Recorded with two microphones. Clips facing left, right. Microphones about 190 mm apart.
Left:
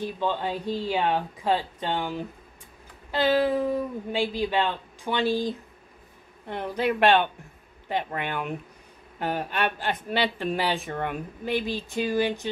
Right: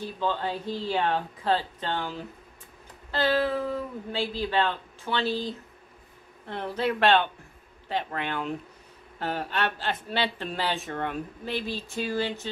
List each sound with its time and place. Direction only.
0.0 s speech: 15° left (ahead or behind)